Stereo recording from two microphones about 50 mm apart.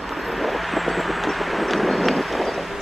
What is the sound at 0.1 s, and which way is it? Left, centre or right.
Vehicle, centre.